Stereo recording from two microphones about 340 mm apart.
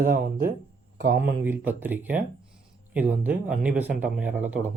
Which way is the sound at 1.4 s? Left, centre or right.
Centre.